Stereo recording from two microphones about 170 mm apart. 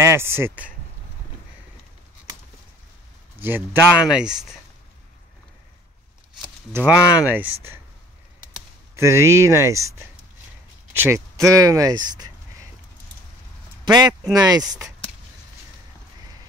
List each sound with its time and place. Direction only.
0.0 s speech: 15° right (ahead or behind)
3.3 s speech: 10° right (ahead or behind)
6.7 s speech: 10° right (ahead or behind)
8.9 s speech: 15° right (ahead or behind)
13.8 s speech: 25° right (ahead or behind)